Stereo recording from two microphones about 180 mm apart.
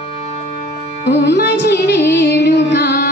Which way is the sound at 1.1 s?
70° left (ahead or behind).